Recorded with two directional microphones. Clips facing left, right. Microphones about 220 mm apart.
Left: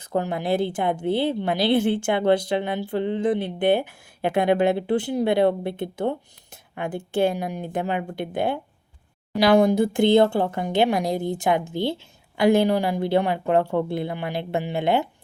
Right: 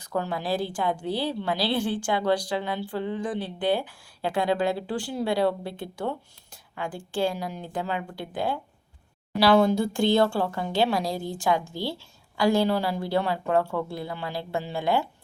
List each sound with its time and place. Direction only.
0.1 s a woman's voice: 20° left (ahead or behind)